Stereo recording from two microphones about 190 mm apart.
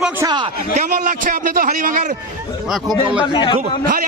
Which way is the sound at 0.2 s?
20° right (ahead or behind).